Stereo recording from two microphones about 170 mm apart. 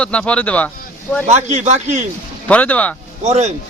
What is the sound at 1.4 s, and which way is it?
Speech, 40° right (ahead or behind).